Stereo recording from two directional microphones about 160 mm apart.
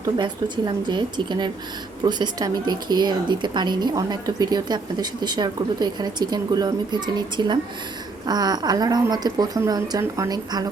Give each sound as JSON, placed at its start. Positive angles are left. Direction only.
{"t": 0.0, "sound": "speech", "side_deg": -30}